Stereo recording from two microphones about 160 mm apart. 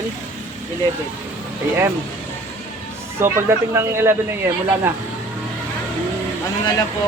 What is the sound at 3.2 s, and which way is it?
Speech, 15° right (ahead or behind).